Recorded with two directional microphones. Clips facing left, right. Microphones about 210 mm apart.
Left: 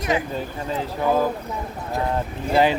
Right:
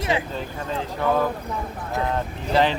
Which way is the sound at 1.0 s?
10° left (ahead or behind).